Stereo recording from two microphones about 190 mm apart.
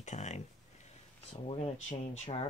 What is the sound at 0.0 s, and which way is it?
Speech, 35° left (ahead or behind).